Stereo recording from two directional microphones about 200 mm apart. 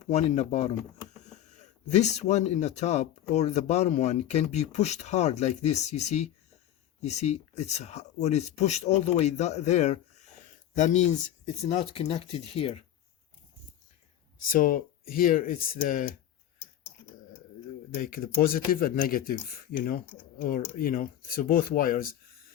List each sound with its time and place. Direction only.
0.1 s speech: 30° left (ahead or behind)
14.4 s speech: 45° left (ahead or behind)
18.0 s speech: 45° left (ahead or behind)